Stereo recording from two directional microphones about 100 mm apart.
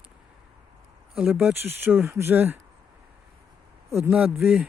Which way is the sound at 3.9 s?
25° right (ahead or behind).